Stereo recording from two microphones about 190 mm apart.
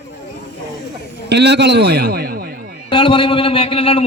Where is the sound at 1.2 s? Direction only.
60° right (ahead or behind).